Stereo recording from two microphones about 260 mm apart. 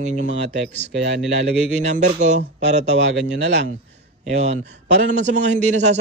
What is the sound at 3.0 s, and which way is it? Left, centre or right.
Speech, right.